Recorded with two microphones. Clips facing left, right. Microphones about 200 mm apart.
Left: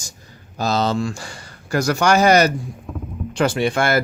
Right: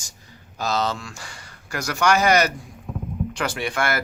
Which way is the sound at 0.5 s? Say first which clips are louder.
Left 5 dB; 30° left (ahead or behind).